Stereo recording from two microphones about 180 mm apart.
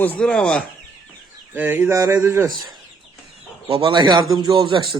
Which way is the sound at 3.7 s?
25° right (ahead or behind).